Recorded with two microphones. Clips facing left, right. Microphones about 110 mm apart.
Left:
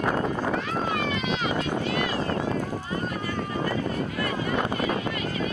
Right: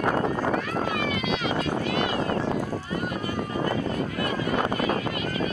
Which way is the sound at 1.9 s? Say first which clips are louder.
Right 1 dB; 25° right (ahead or behind).